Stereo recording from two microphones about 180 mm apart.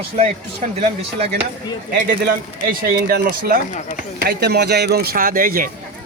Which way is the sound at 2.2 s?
55° right (ahead or behind).